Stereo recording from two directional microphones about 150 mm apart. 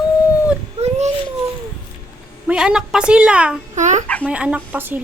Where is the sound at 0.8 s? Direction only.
50° right (ahead or behind).